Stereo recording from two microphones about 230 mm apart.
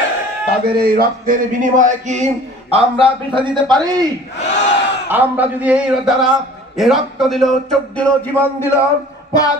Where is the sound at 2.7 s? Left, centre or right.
Right.